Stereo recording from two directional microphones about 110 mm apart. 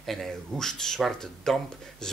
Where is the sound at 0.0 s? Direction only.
5° left (ahead or behind).